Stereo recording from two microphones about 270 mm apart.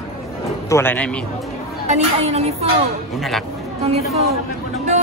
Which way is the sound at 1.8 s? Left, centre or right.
Right.